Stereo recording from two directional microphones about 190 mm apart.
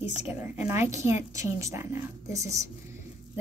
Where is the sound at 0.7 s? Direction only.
15° right (ahead or behind).